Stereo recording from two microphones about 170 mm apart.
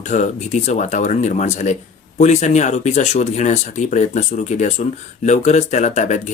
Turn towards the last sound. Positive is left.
turn(degrees=45)  # may be behind; listen again after turning